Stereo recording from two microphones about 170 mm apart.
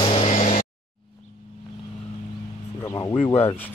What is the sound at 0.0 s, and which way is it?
Vehicle, 35° left (ahead or behind).